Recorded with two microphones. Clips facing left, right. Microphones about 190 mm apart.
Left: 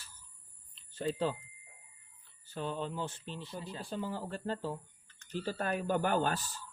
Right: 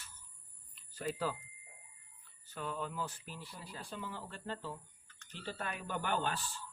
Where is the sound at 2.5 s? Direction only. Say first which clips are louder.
Left 4 dB; 30° left (ahead or behind).